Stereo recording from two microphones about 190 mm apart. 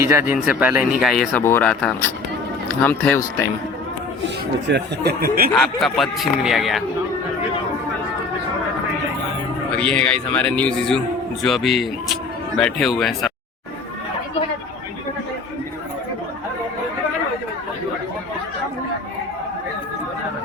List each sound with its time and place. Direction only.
0.0 s speech: 10° right (ahead or behind); by 3.4 s 10° left (ahead or behind)
4.7 s speech: 55° right (ahead or behind)
5.5 s speech: centre (ahead or behind)
9.7 s speech: 5° left (ahead or behind)